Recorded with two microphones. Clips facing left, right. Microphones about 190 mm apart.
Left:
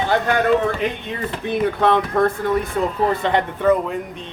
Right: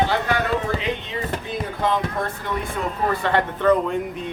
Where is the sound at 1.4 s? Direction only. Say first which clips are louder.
Left 9 dB; 65° left (ahead or behind).